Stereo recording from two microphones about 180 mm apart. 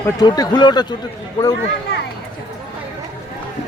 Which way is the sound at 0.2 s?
20° left (ahead or behind).